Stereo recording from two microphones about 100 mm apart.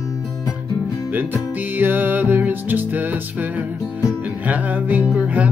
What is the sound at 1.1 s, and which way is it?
Music, 20° right (ahead or behind).